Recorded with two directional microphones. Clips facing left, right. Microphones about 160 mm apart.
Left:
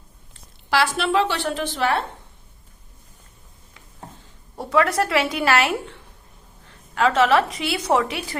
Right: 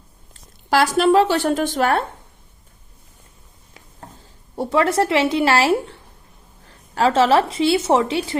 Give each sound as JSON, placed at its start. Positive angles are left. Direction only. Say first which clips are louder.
{"t": 0.7, "sound": "a woman's voice", "louder": "right 6 dB", "side_deg": -40}
{"t": 4.5, "sound": "a woman's voice", "louder": "right 2 dB", "side_deg": -30}